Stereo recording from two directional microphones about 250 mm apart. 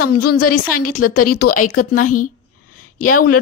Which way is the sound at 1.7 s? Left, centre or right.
Left.